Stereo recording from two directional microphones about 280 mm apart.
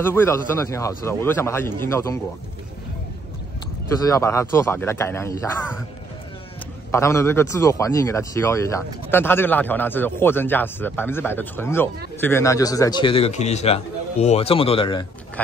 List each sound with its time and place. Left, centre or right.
0.0 s a man's voice: centre
4.0 s a man's voice: centre
6.9 s a man's voice: centre